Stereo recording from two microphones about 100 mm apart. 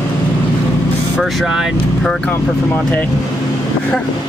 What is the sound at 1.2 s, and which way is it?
Speech, centre (ahead or behind).